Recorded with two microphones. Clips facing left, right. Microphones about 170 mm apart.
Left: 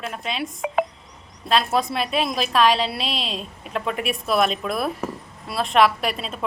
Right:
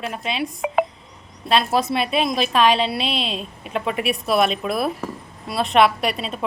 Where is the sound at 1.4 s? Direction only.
Centre (ahead or behind).